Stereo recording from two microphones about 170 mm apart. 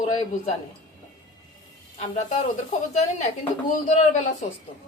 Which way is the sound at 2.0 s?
45° left (ahead or behind).